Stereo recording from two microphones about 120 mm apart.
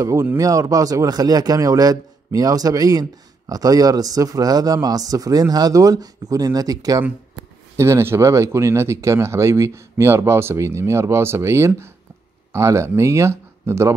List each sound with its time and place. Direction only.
0.0 s speech: 25° right (ahead or behind)